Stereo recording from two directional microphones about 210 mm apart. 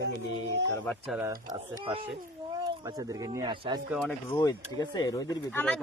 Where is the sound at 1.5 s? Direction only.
20° right (ahead or behind).